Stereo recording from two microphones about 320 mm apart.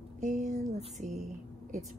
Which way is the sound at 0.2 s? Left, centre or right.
Right.